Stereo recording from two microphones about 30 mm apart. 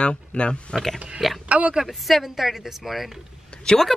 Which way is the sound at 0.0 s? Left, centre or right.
Left.